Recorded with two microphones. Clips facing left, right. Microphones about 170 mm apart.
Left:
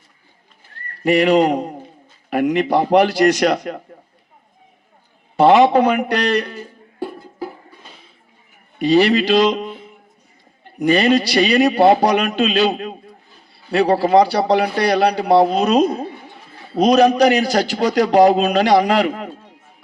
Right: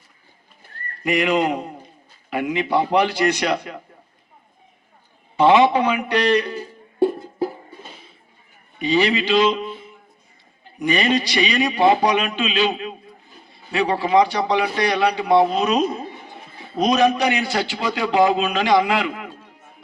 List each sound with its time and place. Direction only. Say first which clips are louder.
1.0 s a man's voice: left 6 dB; 35° left (ahead or behind)
5.4 s a man's voice: left 3 dB; 40° left (ahead or behind)
7.3 s music: right 5 dB; 25° right (ahead or behind)
8.8 s a man's voice: left 5 dB; 40° left (ahead or behind)
10.8 s a man's voice: left 5 dB; 40° left (ahead or behind)